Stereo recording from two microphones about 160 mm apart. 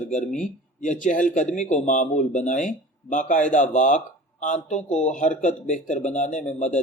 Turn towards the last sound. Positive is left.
turn(degrees=50)  # may be behind; listen again after turning